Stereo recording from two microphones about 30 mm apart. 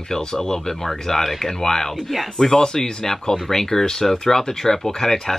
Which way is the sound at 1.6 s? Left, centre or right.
Centre.